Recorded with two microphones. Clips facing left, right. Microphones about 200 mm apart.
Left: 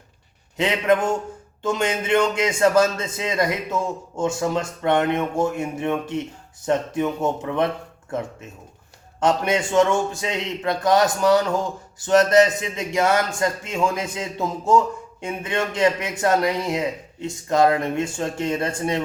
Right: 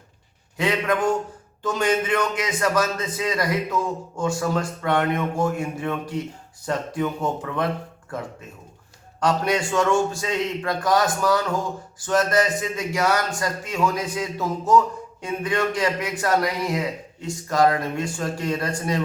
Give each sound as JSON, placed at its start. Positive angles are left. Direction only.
{"t": 0.5, "sound": "a man's voice", "side_deg": 25}